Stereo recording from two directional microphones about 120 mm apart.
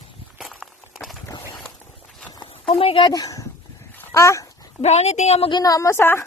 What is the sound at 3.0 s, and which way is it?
Speech, 30° left (ahead or behind).